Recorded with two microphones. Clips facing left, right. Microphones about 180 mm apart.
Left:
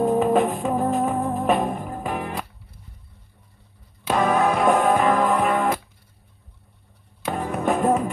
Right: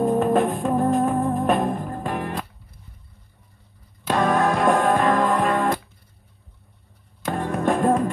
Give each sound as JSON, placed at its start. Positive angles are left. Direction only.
{"t": 0.0, "sound": "music", "side_deg": 0}
{"t": 4.1, "sound": "music", "side_deg": 0}
{"t": 7.2, "sound": "music", "side_deg": 0}